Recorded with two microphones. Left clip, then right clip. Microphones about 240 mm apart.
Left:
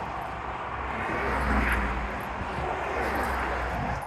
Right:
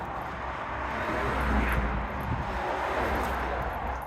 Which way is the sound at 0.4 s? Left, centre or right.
Right.